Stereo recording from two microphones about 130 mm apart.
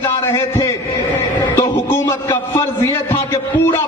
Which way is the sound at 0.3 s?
25° left (ahead or behind).